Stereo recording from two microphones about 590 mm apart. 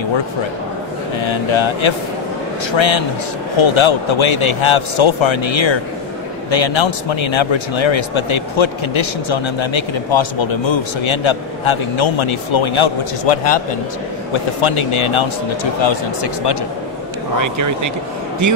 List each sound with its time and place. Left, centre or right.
1.2 s speech: left
17.4 s speech: right